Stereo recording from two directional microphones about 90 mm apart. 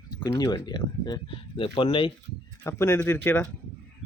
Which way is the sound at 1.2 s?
70° left (ahead or behind).